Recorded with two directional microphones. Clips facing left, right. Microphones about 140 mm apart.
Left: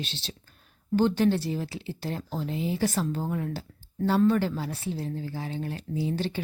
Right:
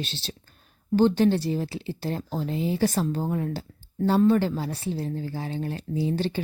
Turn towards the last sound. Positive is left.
turn(degrees=-30)  # may be behind; listen again after turning